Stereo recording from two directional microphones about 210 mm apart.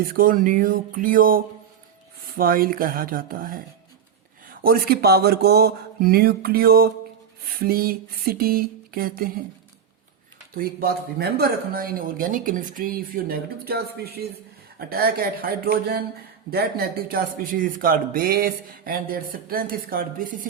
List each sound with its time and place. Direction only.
0.0 s speech: 45° right (ahead or behind)
4.6 s speech: 45° right (ahead or behind)
10.5 s speech: 45° right (ahead or behind)